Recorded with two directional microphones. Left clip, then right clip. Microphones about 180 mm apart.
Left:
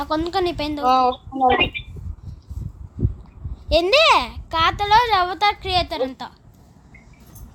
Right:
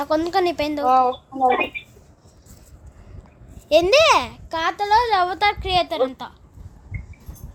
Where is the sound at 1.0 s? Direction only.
50° left (ahead or behind).